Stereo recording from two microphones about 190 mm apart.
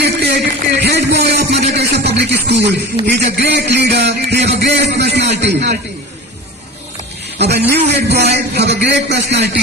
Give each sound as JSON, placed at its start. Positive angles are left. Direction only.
{"t": 0.0, "sound": "a sound", "side_deg": -55}
{"t": 0.8, "sound": "speech", "side_deg": -60}
{"t": 7.3, "sound": "a man's voice", "side_deg": -60}